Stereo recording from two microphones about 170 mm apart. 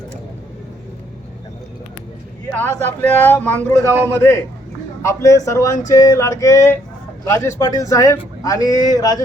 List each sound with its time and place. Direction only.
2.5 s a man's voice: 10° left (ahead or behind)